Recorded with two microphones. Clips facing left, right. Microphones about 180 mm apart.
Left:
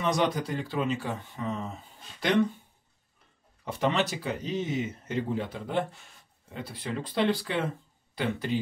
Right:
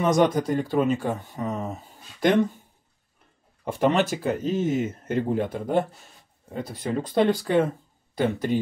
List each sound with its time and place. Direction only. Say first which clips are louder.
0.0 s speech: right 7 dB; 45° right (ahead or behind)
3.6 s speech: right 6 dB; 50° right (ahead or behind)